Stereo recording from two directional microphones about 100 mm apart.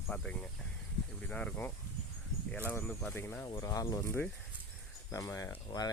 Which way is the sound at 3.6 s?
35° left (ahead or behind).